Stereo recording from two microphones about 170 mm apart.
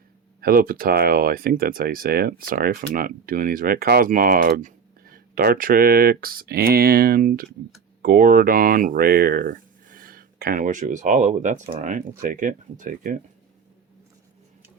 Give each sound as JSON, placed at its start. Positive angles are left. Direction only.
{"t": 0.4, "sound": "speech", "side_deg": -55}